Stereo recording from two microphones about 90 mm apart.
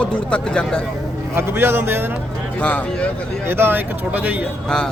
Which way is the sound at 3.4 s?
25° right (ahead or behind).